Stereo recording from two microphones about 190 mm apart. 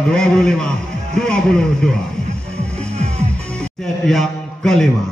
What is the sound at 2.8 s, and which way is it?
Music, 35° right (ahead or behind).